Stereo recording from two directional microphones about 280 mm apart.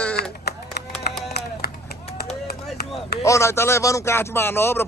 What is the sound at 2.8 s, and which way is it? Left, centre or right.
Chop, left.